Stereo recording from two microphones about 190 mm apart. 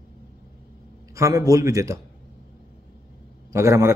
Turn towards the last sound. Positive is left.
turn(degrees=-15)  # may be behind; listen again after turning